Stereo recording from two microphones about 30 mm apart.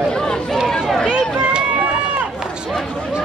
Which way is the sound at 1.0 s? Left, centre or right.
Left.